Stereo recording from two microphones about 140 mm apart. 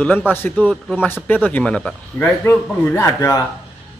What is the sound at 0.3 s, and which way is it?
Speech, 15° left (ahead or behind).